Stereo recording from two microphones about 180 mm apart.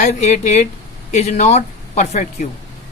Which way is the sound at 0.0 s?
40° left (ahead or behind).